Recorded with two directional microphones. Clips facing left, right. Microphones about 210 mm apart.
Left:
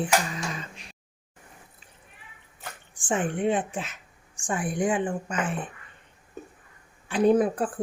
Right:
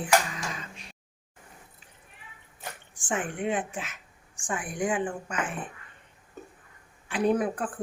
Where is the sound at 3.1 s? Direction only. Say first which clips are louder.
Left 4 dB; 30° left (ahead or behind).